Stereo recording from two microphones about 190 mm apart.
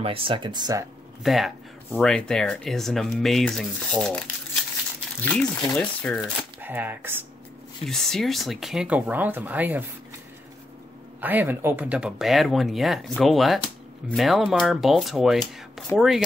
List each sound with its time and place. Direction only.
0.0 s speech: 30° right (ahead or behind)
1.2 s speech: centre (ahead or behind)
5.2 s speech: 5° left (ahead or behind)
6.2 s speech: 10° right (ahead or behind)
7.8 s speech: centre (ahead or behind)
11.1 s speech: 10° right (ahead or behind)